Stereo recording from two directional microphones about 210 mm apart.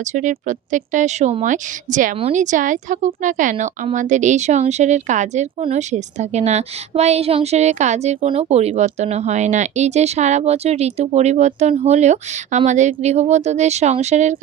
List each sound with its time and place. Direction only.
0.1 s speech: 35° right (ahead or behind)